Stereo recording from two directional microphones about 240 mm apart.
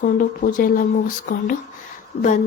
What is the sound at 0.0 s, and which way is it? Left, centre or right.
Speech, left.